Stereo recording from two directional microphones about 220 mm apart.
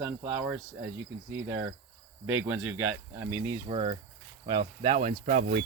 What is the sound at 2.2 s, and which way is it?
Speech, 10° right (ahead or behind).